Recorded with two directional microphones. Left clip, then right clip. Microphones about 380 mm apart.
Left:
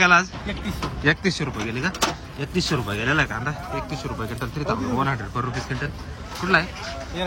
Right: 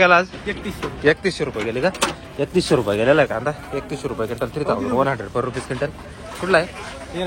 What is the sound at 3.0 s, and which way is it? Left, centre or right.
Speech, centre.